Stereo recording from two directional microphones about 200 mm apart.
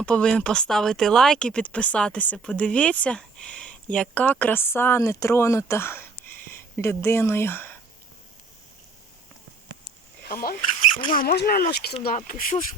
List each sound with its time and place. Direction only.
0.0 s speech: 5° left (ahead or behind)
10.2 s speech: 45° left (ahead or behind)